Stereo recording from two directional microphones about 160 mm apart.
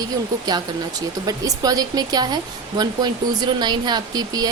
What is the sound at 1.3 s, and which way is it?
Speech, 25° right (ahead or behind).